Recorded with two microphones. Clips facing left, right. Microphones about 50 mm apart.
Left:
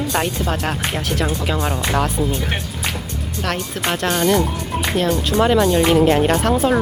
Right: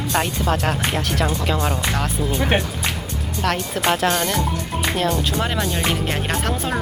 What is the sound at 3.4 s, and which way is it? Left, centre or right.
Speech, centre.